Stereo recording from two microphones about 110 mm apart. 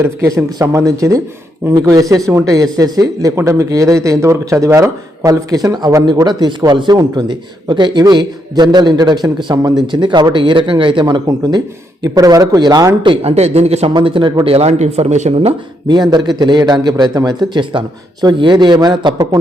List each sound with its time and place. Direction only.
0.3 s a man's voice: 30° right (ahead or behind)
13.0 s speech: 50° right (ahead or behind)
13.3 s speech: 75° right (ahead or behind)
13.9 s speech: 50° right (ahead or behind)
14.5 s speech: 80° right
15.9 s a man's voice: 40° right (ahead or behind)